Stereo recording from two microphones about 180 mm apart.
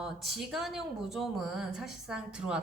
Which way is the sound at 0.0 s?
Centre (ahead or behind).